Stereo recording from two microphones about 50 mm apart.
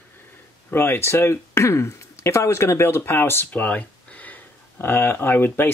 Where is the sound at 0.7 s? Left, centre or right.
Left.